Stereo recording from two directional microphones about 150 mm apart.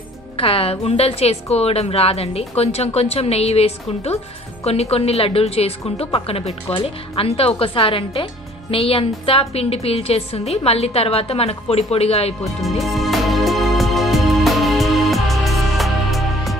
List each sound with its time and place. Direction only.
0.4 s a woman's voice: 40° left (ahead or behind)
12.6 s music: centre (ahead or behind)